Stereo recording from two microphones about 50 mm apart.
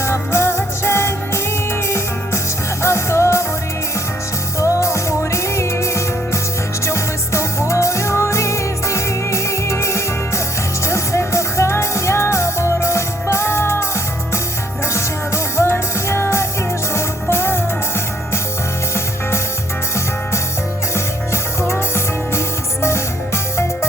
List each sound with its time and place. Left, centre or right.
0.0 s music: left
2.8 s music: left
4.6 s music: left
15.5 s music: left
21.7 s music: left